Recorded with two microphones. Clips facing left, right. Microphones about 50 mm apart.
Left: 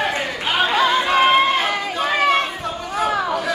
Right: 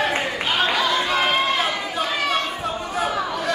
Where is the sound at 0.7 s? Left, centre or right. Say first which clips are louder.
Left 4 dB; left.